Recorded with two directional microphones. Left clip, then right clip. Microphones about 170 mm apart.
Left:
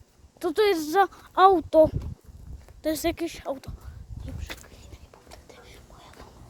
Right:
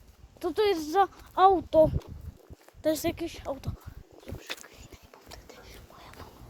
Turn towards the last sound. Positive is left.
turn(degrees=10)  # may be behind; listen again after turning